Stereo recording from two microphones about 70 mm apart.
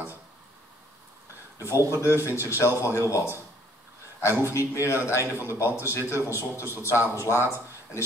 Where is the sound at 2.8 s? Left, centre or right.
Left.